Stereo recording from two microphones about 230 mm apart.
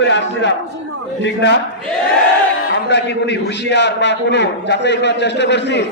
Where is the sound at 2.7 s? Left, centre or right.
Left.